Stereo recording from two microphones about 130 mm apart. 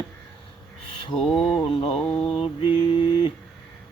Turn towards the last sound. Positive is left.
turn(degrees=40)  # may be behind; listen again after turning